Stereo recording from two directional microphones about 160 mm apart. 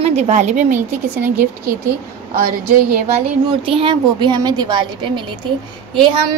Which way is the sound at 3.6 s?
35° right (ahead or behind).